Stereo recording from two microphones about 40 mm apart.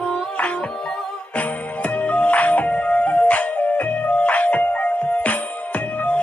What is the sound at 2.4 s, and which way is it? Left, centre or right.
Music, left.